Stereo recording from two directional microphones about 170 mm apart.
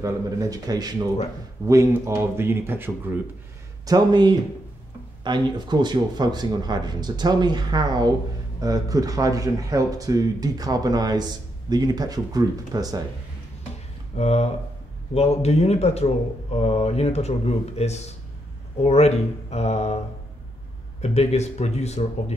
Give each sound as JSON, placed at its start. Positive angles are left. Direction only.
{"t": 0.0, "sound": "speech", "side_deg": -20}
{"t": 3.8, "sound": "speech", "side_deg": -25}
{"t": 14.1, "sound": "speech", "side_deg": 40}
{"t": 21.0, "sound": "speech", "side_deg": 40}